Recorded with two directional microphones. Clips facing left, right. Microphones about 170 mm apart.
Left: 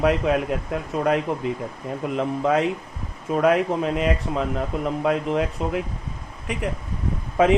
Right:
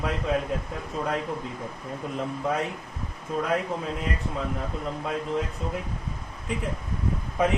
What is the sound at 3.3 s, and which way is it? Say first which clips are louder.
Speech: left 8 dB; 75° left (ahead or behind).